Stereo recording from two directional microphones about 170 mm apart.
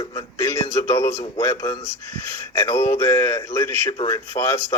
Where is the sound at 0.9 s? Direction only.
15° left (ahead or behind).